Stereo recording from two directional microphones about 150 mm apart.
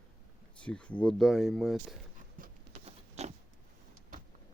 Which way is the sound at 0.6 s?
10° left (ahead or behind).